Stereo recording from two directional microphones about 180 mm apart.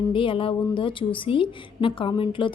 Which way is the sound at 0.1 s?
30° left (ahead or behind).